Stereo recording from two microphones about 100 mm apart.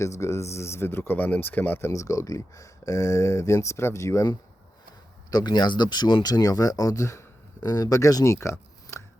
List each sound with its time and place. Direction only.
0.0 s speech: 30° left (ahead or behind)
1.9 s speech: 35° left (ahead or behind)
5.3 s speech: 45° left (ahead or behind); by 9.0 s 25° left (ahead or behind)